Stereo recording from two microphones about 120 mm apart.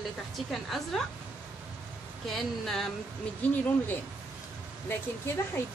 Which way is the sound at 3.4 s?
15° left (ahead or behind).